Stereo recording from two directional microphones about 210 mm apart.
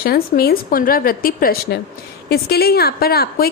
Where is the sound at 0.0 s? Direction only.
45° left (ahead or behind).